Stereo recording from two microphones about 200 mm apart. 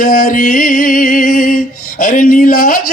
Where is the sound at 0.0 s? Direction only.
40° left (ahead or behind).